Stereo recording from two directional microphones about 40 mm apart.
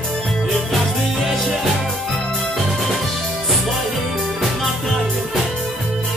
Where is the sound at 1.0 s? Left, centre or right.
Centre.